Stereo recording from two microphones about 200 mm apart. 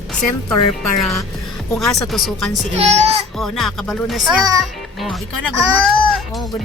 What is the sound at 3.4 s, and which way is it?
Speech, centre (ahead or behind).